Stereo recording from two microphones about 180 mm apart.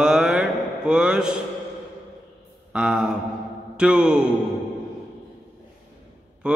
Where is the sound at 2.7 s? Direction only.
5° right (ahead or behind).